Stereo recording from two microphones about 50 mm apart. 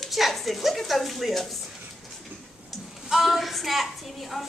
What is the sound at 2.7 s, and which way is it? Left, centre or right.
A woman's voice, centre.